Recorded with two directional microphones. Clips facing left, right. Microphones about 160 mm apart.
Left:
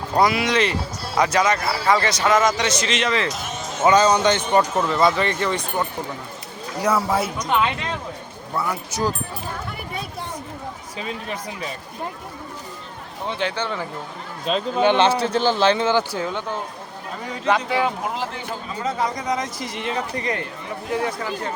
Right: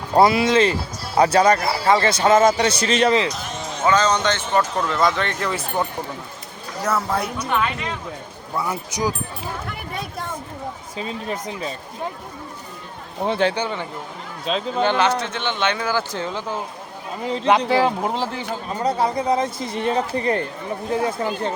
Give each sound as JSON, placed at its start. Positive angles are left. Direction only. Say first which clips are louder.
{"t": 0.2, "sound": "speech", "louder": "right 4 dB", "side_deg": -30}
{"t": 3.2, "sound": "music", "louder": "right 1 dB", "side_deg": 0}
{"t": 3.8, "sound": "speech", "louder": "left 3 dB", "side_deg": 10}
{"t": 4.9, "sound": "speech", "louder": "left 2 dB", "side_deg": 5}
{"t": 6.8, "sound": "speech", "louder": "left 2 dB", "side_deg": 10}
{"t": 8.5, "sound": "speech", "louder": "even", "side_deg": -20}
{"t": 11.0, "sound": "speech", "louder": "right 2 dB", "side_deg": -30}
{"t": 13.6, "sound": "speech", "louder": "right 2 dB", "side_deg": -15}
{"t": 14.4, "sound": "speech", "louder": "left 1 dB", "side_deg": 0}
{"t": 15.2, "sound": "speech", "louder": "left 5 dB", "side_deg": 35}
{"t": 16.1, "sound": "speech", "louder": "left 1 dB", "side_deg": 0}
{"t": 17.4, "sound": "speech", "louder": "right 3 dB", "side_deg": -30}